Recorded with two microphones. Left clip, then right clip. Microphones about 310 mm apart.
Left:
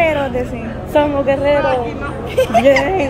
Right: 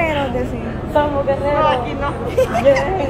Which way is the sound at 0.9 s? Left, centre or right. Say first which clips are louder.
Left 3 dB; left.